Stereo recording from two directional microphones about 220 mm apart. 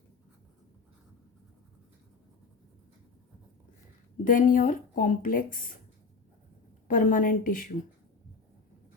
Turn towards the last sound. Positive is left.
turn(degrees=40)  # may be behind; listen again after turning